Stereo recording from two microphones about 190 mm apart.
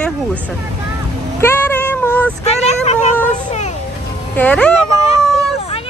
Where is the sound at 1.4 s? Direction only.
10° left (ahead or behind).